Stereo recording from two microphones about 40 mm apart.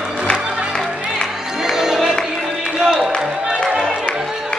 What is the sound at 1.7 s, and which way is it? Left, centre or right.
Music, centre.